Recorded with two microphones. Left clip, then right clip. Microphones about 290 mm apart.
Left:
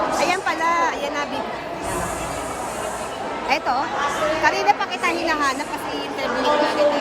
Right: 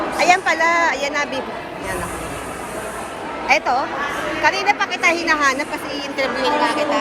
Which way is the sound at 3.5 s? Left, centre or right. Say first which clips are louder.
Right 4 dB; centre.